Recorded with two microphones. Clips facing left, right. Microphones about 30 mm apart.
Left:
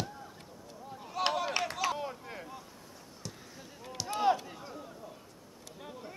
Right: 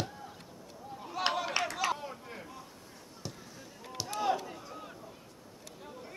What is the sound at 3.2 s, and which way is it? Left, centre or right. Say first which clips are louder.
Basketball bounce: right 2 dB; centre.